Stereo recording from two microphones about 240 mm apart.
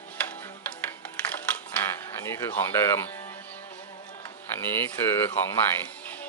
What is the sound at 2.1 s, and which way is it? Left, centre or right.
Speech, centre.